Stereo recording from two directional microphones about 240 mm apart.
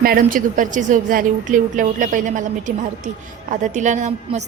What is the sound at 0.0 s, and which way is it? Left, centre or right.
A woman's voice, right.